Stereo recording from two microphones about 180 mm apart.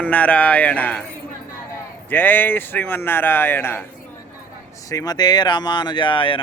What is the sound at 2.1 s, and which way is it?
Speech, 10° left (ahead or behind).